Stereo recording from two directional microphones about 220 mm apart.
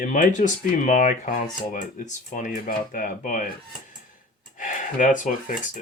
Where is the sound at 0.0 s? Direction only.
35° left (ahead or behind).